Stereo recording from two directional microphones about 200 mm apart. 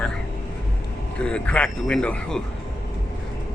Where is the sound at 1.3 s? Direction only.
5° left (ahead or behind).